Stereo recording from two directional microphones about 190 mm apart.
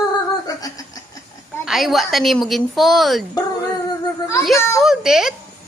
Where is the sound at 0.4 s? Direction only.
20° left (ahead or behind).